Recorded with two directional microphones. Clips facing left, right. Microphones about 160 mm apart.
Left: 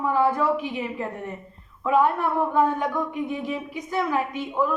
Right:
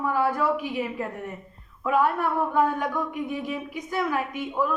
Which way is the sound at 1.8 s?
20° left (ahead or behind).